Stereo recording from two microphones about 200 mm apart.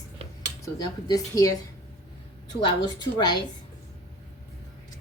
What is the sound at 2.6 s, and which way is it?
Speech, 20° left (ahead or behind).